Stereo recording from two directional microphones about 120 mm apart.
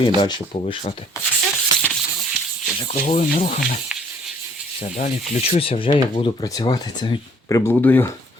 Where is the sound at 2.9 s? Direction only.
70° left (ahead or behind).